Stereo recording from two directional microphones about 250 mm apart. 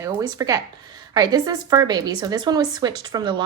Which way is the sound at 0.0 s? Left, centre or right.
Centre.